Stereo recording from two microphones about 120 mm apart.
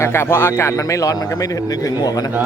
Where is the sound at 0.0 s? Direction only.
20° left (ahead or behind).